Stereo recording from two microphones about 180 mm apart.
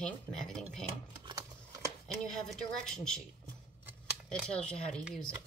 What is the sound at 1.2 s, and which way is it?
Typing, 20° right (ahead or behind).